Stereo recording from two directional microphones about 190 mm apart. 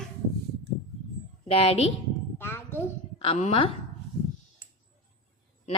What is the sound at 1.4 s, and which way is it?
Speech, 30° left (ahead or behind).